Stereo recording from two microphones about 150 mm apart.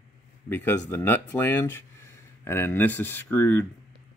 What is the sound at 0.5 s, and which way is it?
Speech, 15° left (ahead or behind).